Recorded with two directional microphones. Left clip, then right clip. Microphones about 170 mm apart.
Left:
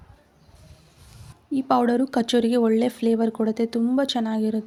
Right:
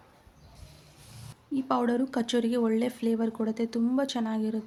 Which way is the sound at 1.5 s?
25° left (ahead or behind).